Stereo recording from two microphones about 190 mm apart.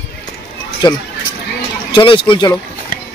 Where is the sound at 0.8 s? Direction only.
25° left (ahead or behind).